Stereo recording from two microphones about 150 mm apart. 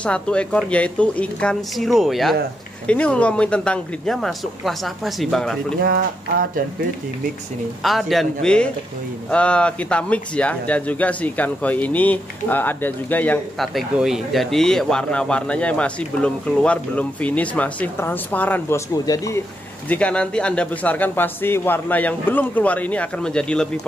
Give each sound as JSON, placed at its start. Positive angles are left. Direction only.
{"t": 0.0, "sound": "speech", "side_deg": 5}
{"t": 5.8, "sound": "speech", "side_deg": -80}
{"t": 7.8, "sound": "speech", "side_deg": 0}
{"t": 13.7, "sound": "speech", "side_deg": -5}
{"t": 19.0, "sound": "speech", "side_deg": 25}
{"t": 19.9, "sound": "speech", "side_deg": 10}